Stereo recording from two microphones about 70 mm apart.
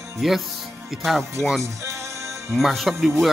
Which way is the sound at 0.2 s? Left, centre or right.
Centre.